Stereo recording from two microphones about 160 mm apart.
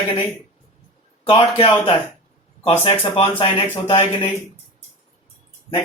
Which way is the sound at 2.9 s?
40° left (ahead or behind).